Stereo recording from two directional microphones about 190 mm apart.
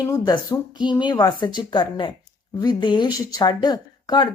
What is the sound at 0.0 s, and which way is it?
Speech, 20° left (ahead or behind).